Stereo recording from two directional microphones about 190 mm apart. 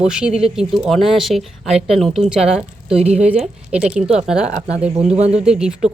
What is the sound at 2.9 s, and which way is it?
Speech, 35° right (ahead or behind).